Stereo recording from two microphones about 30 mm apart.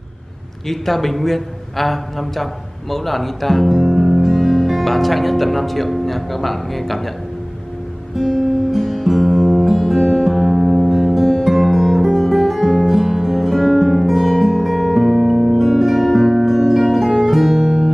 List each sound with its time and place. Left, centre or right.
0.7 s a man's voice: centre
8.2 s guitar: centre
9.8 s music: centre
10.9 s music: centre
17.6 s music: centre